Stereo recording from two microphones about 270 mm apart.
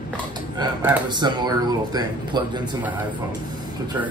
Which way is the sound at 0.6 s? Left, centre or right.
Centre.